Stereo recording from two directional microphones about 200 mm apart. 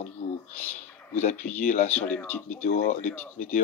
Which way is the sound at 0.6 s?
40° left (ahead or behind).